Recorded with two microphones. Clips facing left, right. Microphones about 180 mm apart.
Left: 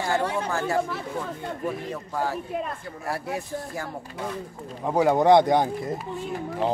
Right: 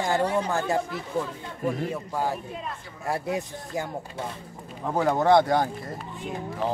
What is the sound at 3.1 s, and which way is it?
Speech, 20° right (ahead or behind).